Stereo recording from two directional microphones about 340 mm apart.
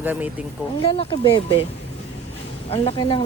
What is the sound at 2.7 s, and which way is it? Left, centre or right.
Speech, centre.